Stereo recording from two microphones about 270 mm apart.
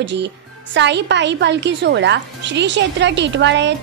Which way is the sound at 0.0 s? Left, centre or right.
Right.